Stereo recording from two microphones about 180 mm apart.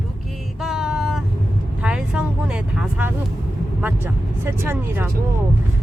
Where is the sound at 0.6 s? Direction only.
Centre (ahead or behind).